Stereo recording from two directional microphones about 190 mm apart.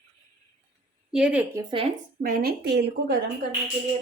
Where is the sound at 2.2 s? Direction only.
50° right (ahead or behind).